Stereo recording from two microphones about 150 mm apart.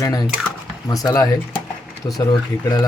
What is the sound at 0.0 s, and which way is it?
Speech, 25° left (ahead or behind).